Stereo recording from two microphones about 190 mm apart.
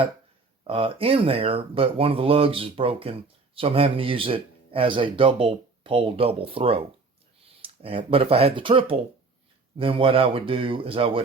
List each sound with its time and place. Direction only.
0.7 s speech: 30° right (ahead or behind)